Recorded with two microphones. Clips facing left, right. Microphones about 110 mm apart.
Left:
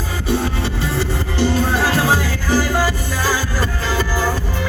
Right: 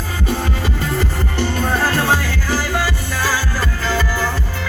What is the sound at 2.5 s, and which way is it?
Music, 25° left (ahead or behind).